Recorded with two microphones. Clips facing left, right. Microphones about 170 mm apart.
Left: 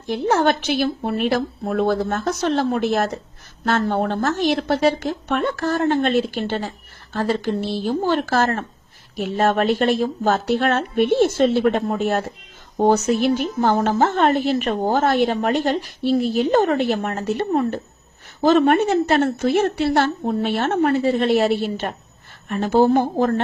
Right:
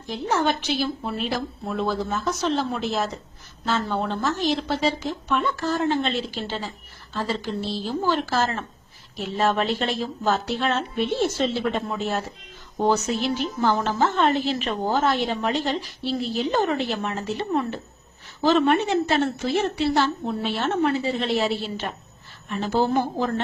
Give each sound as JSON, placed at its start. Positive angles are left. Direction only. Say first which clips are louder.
{"t": 0.1, "sound": "a woman's voice", "louder": "left 5 dB", "side_deg": 60}